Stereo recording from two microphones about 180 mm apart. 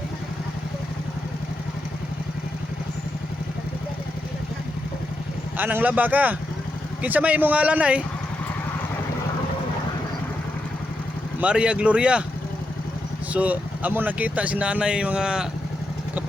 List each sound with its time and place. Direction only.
5.5 s speech: 10° right (ahead or behind)
11.3 s speech: 5° right (ahead or behind)
13.3 s speech: 10° right (ahead or behind)